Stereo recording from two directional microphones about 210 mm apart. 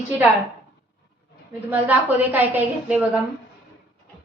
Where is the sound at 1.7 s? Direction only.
10° right (ahead or behind).